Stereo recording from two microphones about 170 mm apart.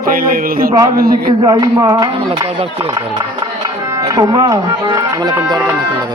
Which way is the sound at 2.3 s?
35° right (ahead or behind).